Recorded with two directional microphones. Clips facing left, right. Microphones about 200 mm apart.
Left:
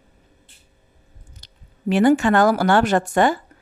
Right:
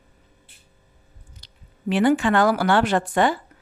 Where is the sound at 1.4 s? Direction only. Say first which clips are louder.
Left 4 dB; 45° left (ahead or behind).